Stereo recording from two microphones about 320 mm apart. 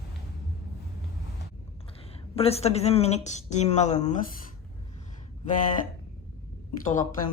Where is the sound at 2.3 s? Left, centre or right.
Centre.